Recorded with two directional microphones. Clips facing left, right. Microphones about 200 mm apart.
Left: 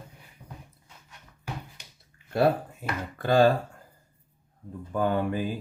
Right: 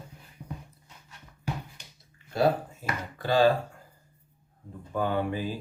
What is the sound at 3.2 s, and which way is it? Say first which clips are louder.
Speech: left 2 dB; 50° left (ahead or behind).